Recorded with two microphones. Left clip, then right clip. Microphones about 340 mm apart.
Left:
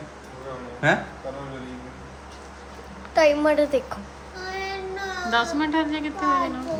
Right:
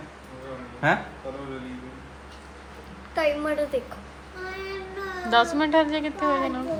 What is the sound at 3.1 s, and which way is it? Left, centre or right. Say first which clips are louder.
Speech: left 6 dB; left.